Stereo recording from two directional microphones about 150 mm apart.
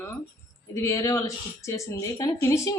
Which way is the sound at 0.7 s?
20° left (ahead or behind).